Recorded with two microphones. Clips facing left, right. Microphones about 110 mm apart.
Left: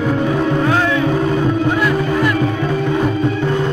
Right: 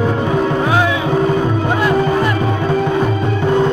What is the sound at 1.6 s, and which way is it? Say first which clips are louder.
Music: right 2 dB; 25° right (ahead or behind).